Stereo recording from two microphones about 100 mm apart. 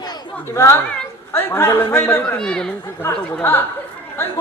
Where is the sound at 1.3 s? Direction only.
25° left (ahead or behind).